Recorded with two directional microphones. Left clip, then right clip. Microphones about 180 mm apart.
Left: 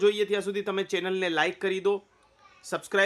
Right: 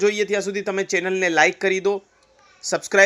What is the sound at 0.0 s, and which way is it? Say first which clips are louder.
Speech: right 4 dB; 10° right (ahead or behind).